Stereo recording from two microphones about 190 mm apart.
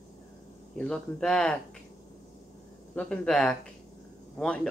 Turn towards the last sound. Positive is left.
turn(degrees=5)  # may be behind; listen again after turning